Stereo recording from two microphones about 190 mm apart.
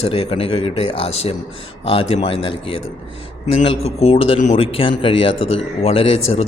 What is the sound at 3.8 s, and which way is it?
Speech, 30° left (ahead or behind).